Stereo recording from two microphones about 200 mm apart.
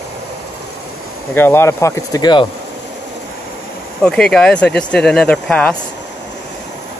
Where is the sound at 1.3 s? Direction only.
10° left (ahead or behind).